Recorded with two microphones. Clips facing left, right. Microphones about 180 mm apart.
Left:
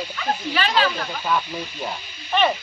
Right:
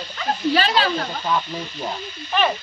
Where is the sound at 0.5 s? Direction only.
35° right (ahead or behind).